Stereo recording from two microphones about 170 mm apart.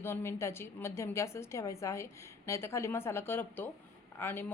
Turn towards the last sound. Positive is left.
turn(degrees=10)  # may be behind; listen again after turning